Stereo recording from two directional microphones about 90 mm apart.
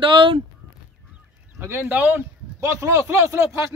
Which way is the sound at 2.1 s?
30° right (ahead or behind).